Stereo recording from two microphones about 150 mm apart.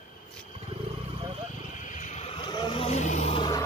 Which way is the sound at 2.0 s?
50° left (ahead or behind).